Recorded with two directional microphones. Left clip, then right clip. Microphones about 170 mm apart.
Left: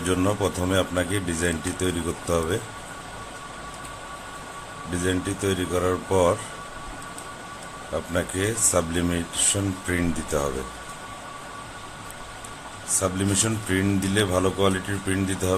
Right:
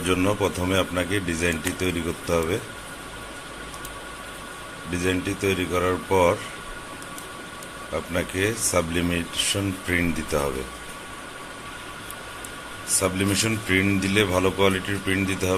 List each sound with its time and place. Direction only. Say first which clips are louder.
0.0 s speech: right 1 dB; 15° left (ahead or behind)
5.0 s speech: right 2 dB; 15° left (ahead or behind)
7.9 s speech: even; 15° left (ahead or behind)
13.0 s speech: right 2 dB; 15° left (ahead or behind)